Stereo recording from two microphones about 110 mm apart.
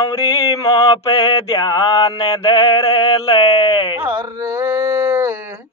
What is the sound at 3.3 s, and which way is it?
Speech, 55° left (ahead or behind).